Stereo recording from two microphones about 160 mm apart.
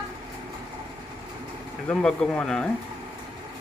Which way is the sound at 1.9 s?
5° left (ahead or behind).